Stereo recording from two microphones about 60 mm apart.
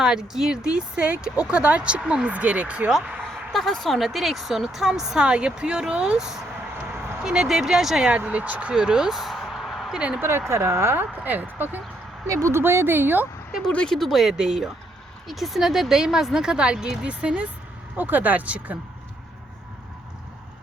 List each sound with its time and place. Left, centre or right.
0.0 s speech: centre
3.2 s a sound: centre
3.5 s speech: centre
8.2 s speech: right
8.7 s a sound: centre
9.9 s speech: centre
10.2 s speech: right
11.1 s speech: right
12.3 s speech: right
12.5 s speech: right
13.9 s speech: centre; by 18.8 s right